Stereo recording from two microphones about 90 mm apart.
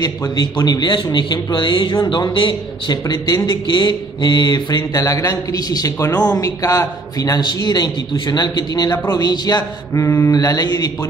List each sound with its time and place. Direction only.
0.0 s speech: 40° left (ahead or behind)
0.7 s a man's voice: 60° left (ahead or behind)
2.9 s a man's voice: 50° left (ahead or behind)
4.9 s a man's voice: 40° left (ahead or behind)
8.9 s speech: 30° left (ahead or behind)
9.2 s a man's voice: 50° left (ahead or behind)
9.9 s speech: 30° left (ahead or behind)
10.3 s a man's voice: 45° left (ahead or behind)